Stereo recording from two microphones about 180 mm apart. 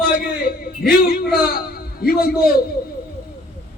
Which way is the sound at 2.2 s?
55° left (ahead or behind).